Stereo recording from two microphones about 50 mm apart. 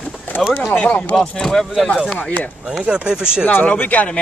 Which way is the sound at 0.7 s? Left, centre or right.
Left.